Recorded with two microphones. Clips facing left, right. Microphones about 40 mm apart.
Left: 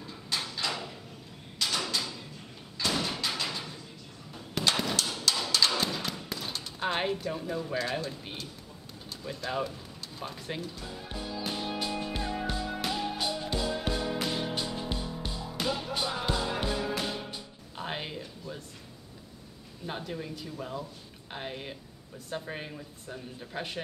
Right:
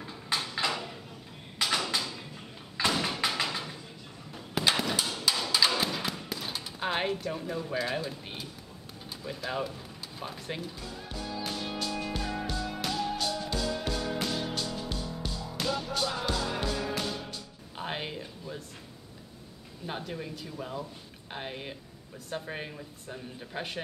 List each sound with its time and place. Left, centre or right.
0.0 s a sound: centre
2.9 s thump: centre
9.2 s a woman's voice: centre
11.1 s music: centre
17.0 s music: centre
17.7 s a sound: centre
19.9 s a woman's voice: centre